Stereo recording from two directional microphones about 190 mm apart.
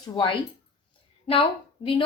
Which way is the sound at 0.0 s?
25° left (ahead or behind).